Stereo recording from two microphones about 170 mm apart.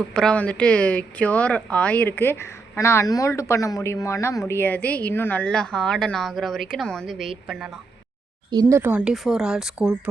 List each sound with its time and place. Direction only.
0.1 s speech: 5° left (ahead or behind)
8.4 s speech: 25° right (ahead or behind)
8.8 s speech: 10° right (ahead or behind)